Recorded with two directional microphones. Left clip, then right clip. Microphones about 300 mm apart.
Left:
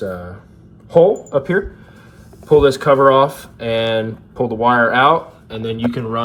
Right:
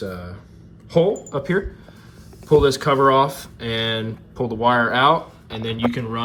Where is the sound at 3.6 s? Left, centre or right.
Right.